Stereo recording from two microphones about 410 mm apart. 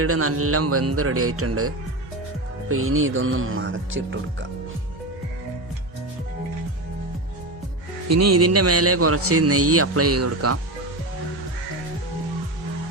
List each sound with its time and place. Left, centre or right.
0.0 s a man's voice: right
8.0 s a man's voice: right